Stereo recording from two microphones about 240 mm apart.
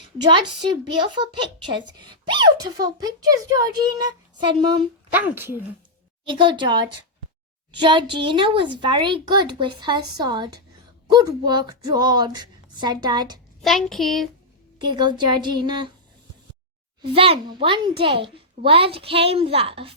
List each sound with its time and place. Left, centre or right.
0.9 s a child's voice: centre
6.2 s a child's voice: right
13.6 s child singing: centre
14.8 s speech: centre
17.0 s speech: right